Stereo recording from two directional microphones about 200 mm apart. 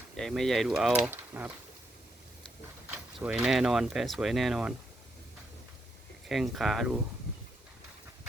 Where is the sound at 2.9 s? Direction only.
5° right (ahead or behind).